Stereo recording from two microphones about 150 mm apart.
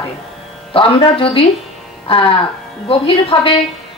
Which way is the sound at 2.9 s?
40° left (ahead or behind).